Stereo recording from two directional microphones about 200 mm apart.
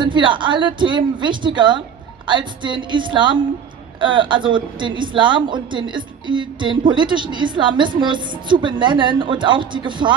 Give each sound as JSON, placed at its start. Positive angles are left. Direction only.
{"t": 0.0, "sound": "a woman's voice", "side_deg": -25}